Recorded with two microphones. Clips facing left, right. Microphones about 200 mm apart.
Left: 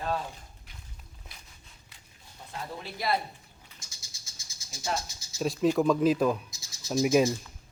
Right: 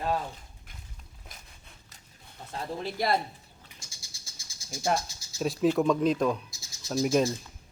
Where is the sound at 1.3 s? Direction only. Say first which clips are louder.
Right 5 dB; 45° right (ahead or behind).